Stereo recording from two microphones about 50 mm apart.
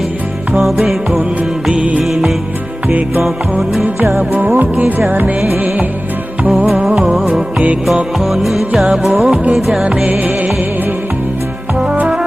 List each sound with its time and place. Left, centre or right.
0.6 s music: centre
1.7 s music: right
4.4 s music: right
6.8 s music: centre
10.1 s music: right